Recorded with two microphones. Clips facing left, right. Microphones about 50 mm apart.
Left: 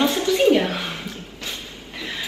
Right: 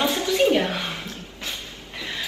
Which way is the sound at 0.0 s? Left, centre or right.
Centre.